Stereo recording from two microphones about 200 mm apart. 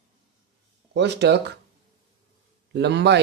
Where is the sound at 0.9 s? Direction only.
60° right (ahead or behind).